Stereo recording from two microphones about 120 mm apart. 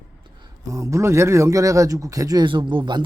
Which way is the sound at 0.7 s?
25° right (ahead or behind).